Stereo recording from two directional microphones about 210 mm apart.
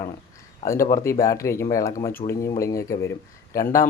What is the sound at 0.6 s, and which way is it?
Speech, 15° left (ahead or behind).